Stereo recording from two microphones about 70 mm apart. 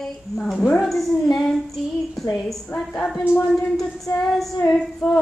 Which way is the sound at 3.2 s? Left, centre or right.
Left.